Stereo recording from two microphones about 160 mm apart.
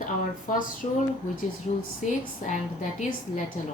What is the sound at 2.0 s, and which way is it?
A woman's voice, 50° left (ahead or behind).